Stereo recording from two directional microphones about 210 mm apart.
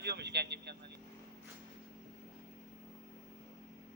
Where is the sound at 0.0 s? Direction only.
50° right (ahead or behind).